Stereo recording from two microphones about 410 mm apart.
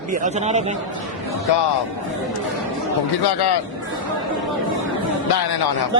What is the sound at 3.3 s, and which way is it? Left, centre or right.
Speech, left.